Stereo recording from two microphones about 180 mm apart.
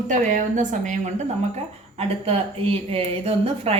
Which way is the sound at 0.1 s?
45° right (ahead or behind).